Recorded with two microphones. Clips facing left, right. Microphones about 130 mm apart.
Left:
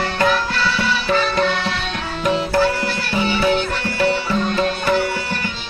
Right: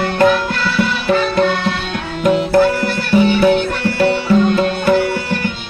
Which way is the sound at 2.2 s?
55° right (ahead or behind).